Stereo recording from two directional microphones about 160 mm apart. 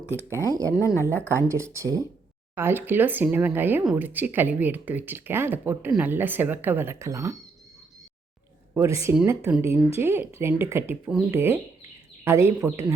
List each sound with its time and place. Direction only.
0.4 s speech: 20° right (ahead or behind)
0.8 s speech: 20° left (ahead or behind)
1.4 s speech: 15° right (ahead or behind)
8.7 s speech: 15° right (ahead or behind)